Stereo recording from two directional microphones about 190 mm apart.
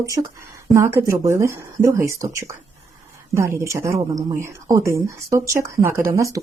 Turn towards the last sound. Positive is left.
turn(degrees=-15)  # may be behind; listen again after turning